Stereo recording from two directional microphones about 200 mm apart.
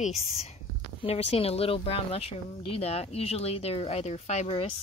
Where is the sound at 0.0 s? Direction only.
30° left (ahead or behind).